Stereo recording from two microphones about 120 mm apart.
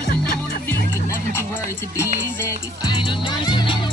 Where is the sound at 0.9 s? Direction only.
25° left (ahead or behind).